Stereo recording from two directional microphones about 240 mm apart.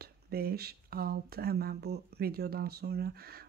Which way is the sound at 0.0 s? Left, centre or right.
Right.